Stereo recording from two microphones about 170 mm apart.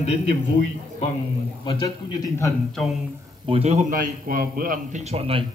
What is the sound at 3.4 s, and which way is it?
Speech, 35° right (ahead or behind).